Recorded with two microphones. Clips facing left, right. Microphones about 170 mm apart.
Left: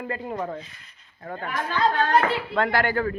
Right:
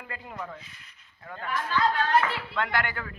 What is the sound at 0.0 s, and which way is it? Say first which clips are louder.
Speech: left 9 dB; 35° left (ahead or behind).